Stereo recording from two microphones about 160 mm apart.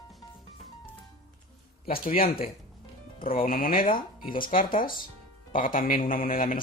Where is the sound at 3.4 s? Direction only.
65° left (ahead or behind).